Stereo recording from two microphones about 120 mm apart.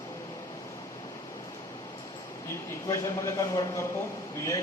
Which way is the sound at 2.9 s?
30° left (ahead or behind).